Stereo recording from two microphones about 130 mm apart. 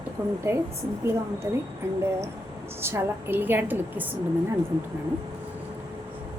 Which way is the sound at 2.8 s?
20° right (ahead or behind).